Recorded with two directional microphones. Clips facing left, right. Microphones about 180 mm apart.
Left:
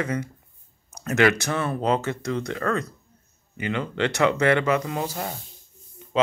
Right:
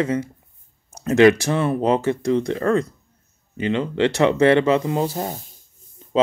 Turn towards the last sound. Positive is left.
turn(degrees=-30)  # may be behind; listen again after turning